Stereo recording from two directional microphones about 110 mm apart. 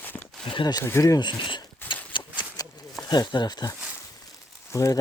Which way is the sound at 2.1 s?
45° left (ahead or behind).